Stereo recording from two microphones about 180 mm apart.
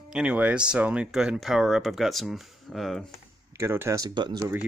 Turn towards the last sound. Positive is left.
turn(degrees=-25)  # may be behind; listen again after turning